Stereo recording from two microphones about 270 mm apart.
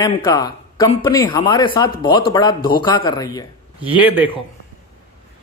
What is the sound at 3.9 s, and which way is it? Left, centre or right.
Speech, centre.